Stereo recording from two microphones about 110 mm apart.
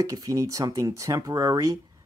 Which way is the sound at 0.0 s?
30° right (ahead or behind).